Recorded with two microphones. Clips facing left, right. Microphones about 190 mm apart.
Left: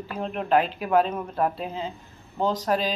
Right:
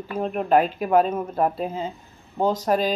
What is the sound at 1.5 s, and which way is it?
Speech, 45° right (ahead or behind).